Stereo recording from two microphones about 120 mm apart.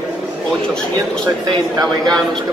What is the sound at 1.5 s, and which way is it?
Speech, 35° right (ahead or behind).